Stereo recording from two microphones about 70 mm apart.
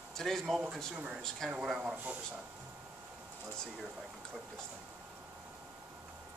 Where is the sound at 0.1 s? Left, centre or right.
Centre.